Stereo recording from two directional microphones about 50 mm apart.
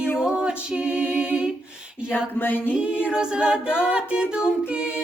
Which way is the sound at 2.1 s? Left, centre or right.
Left.